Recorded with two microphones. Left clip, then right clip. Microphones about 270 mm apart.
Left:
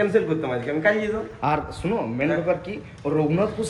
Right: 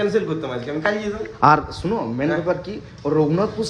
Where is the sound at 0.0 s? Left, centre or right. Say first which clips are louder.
Even; centre.